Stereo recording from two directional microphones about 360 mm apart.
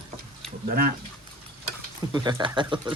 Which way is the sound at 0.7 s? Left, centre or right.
Right.